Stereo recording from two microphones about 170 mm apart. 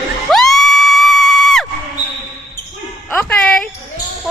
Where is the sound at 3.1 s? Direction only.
5° left (ahead or behind).